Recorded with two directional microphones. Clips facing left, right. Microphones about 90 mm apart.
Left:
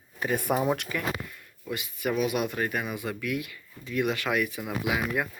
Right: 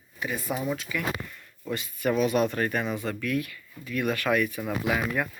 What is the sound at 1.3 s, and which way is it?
Speech, 10° left (ahead or behind).